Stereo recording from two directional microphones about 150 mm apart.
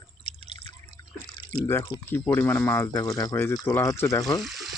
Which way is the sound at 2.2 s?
15° left (ahead or behind).